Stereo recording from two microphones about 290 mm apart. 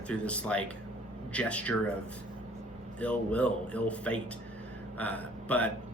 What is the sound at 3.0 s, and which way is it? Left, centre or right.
A man's voice, centre.